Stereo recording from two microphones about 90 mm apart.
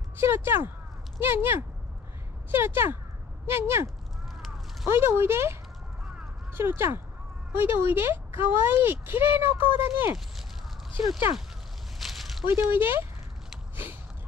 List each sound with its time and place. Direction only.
0.2 s speech: 25° right (ahead or behind)
12.0 s a sound: centre (ahead or behind)
12.4 s speech: 25° right (ahead or behind)